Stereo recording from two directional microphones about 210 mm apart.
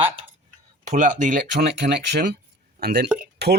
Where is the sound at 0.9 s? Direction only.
35° right (ahead or behind).